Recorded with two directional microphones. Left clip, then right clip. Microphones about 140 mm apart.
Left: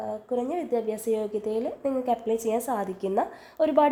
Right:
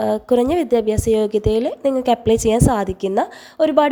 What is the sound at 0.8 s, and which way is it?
A woman's voice, 50° right (ahead or behind).